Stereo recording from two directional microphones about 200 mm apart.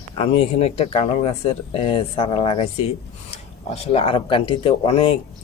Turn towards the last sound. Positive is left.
turn(degrees=25)  # may be behind; listen again after turning